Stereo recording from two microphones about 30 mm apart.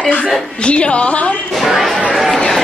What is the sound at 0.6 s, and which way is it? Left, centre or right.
Speech, left.